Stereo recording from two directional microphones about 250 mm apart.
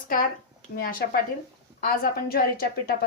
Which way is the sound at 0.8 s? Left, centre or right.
Left.